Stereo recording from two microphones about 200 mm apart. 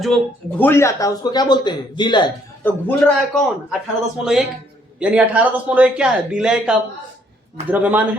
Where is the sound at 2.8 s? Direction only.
Centre (ahead or behind).